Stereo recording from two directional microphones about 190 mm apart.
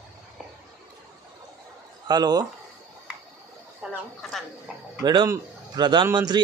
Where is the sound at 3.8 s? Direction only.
5° right (ahead or behind).